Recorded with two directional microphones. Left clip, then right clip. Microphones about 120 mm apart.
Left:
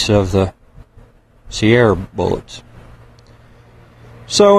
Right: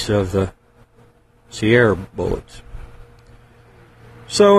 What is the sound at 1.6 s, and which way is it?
Speech, 20° left (ahead or behind).